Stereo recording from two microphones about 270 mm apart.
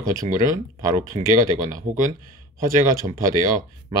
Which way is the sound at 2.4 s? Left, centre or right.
Centre.